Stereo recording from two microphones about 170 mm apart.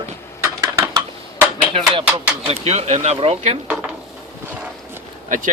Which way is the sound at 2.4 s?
40° right (ahead or behind).